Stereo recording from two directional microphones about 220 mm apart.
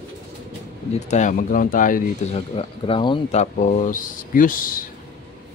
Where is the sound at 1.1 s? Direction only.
35° left (ahead or behind).